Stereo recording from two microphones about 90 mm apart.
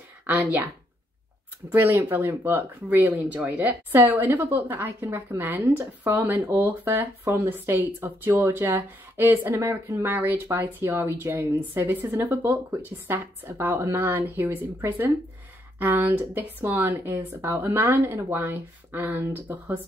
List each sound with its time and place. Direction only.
0.3 s speech: 20° right (ahead or behind)
1.7 s speech: 30° right (ahead or behind)